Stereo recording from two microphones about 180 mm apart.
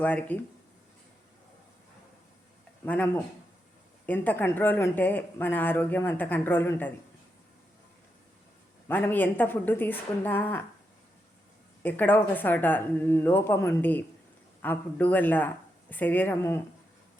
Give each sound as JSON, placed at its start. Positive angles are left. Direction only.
{"t": 0.0, "sound": "speech", "side_deg": 10}
{"t": 2.8, "sound": "speech", "side_deg": 10}
{"t": 8.9, "sound": "speech", "side_deg": 10}
{"t": 11.8, "sound": "speech", "side_deg": 10}